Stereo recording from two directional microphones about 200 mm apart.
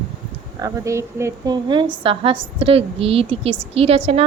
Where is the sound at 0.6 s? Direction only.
15° right (ahead or behind).